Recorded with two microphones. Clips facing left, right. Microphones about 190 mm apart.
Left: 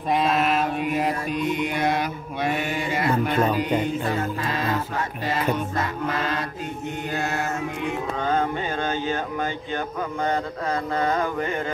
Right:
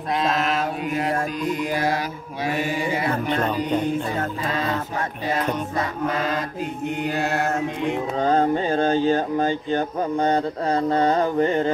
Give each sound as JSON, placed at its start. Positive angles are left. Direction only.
{"t": 3.3, "sound": "speech", "side_deg": 10}
{"t": 8.2, "sound": "speech", "side_deg": -35}